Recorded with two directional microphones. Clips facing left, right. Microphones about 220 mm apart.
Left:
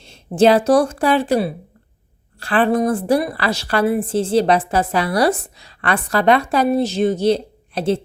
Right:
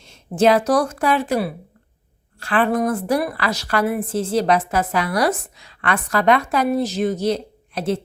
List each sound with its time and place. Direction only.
0.0 s a woman's voice: 30° left (ahead or behind)